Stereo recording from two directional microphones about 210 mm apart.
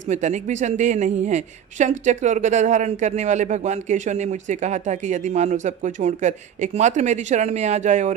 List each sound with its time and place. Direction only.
0.0 s a woman's voice: 35° right (ahead or behind)